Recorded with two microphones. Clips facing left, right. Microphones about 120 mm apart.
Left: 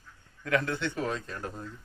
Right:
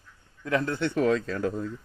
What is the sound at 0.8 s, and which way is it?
Speech, 80° right.